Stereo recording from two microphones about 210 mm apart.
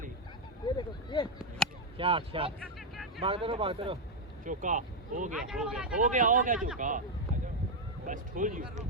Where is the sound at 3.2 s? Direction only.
25° right (ahead or behind).